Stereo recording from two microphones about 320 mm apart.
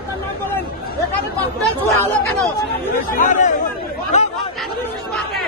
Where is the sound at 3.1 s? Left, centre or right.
Left.